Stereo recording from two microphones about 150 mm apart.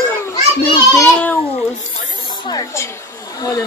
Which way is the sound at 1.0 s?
10° left (ahead or behind).